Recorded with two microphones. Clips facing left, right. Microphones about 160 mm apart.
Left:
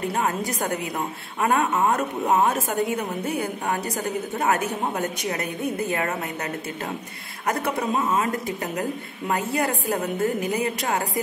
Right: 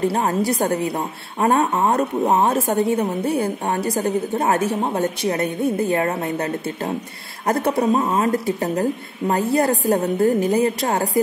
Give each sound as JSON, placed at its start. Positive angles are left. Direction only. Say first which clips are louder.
{"t": 0.0, "sound": "a woman's voice", "louder": "right 6 dB", "side_deg": -35}